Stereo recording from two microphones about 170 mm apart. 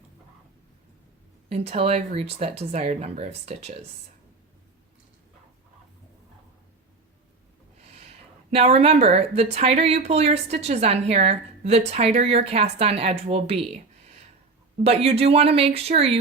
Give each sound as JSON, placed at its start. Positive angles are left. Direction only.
{"t": 1.5, "sound": "speech", "side_deg": -35}
{"t": 7.9, "sound": "speech", "side_deg": -40}